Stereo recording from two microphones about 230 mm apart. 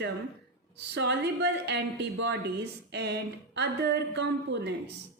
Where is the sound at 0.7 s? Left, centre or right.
Right.